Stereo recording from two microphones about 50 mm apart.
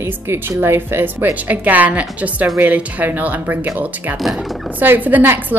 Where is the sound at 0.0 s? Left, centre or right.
Right.